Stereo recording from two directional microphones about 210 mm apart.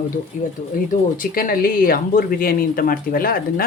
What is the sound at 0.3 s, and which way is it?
Speech, 40° left (ahead or behind).